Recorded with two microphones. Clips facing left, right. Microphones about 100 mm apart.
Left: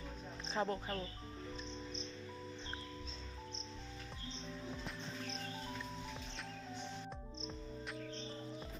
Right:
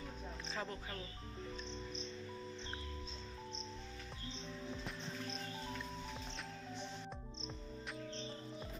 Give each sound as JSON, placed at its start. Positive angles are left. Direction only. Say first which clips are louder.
{"t": 0.5, "sound": "speech", "louder": "left 8 dB", "side_deg": 30}